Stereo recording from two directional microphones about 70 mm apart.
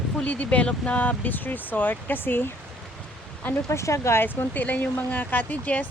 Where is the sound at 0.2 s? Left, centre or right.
Centre.